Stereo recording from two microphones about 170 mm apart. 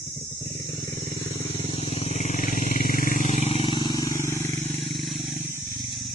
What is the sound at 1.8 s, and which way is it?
Wild animals, 40° left (ahead or behind).